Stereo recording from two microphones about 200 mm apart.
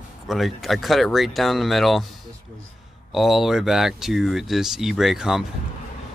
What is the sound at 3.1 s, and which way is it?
Speech, centre (ahead or behind).